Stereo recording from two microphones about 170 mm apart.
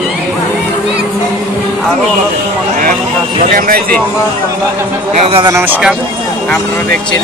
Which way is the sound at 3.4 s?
50° right (ahead or behind).